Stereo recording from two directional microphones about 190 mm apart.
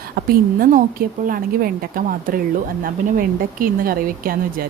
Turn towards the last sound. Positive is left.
turn(degrees=-50)  # may be behind; listen again after turning